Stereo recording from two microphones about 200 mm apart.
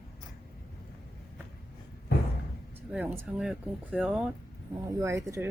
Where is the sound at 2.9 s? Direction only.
5° right (ahead or behind).